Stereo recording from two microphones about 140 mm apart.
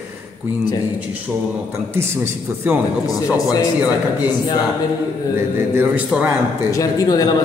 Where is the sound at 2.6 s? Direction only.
10° right (ahead or behind).